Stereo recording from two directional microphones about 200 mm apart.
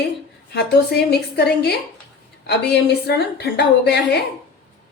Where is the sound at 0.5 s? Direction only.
55° left (ahead or behind).